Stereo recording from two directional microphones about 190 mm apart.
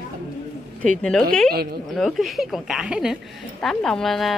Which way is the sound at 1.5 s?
55° right (ahead or behind).